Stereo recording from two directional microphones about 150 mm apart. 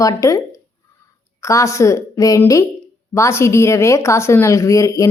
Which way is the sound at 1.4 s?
20° left (ahead or behind).